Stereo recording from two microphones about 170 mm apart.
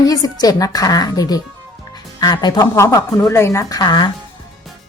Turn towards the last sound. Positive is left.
turn(degrees=25)  # may be behind; listen again after turning